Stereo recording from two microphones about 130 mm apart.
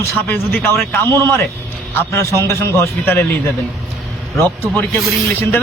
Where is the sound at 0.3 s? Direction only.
15° left (ahead or behind).